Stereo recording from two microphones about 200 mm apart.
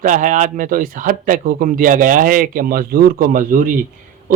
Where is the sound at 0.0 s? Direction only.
40° right (ahead or behind).